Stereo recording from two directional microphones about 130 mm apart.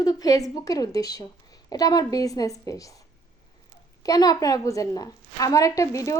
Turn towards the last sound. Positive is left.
turn(degrees=25)  # may be behind; listen again after turning